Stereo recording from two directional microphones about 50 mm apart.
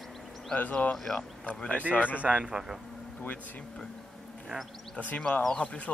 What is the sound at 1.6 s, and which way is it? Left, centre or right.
Speech, left.